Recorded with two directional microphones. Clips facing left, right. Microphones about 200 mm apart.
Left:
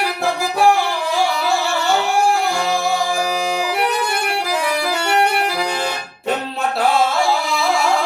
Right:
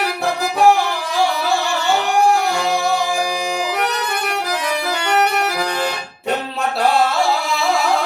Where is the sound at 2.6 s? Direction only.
Centre (ahead or behind).